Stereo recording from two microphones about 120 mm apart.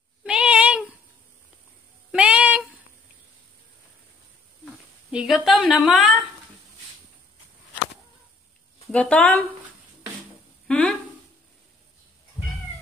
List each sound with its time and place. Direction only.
0.2 s a sound: 10° right (ahead or behind)
2.1 s cat: 10° right (ahead or behind)
5.1 s a woman's voice: 5° right (ahead or behind)
8.8 s speech: 10° left (ahead or behind)
10.7 s a sound: 10° left (ahead or behind)
12.4 s cat: 45° left (ahead or behind)